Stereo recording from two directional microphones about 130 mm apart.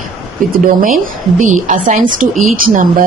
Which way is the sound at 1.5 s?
75° right (ahead or behind).